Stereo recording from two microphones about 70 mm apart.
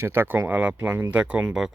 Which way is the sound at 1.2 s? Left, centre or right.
Centre.